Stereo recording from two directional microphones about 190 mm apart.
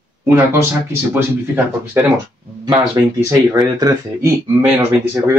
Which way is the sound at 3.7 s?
20° right (ahead or behind).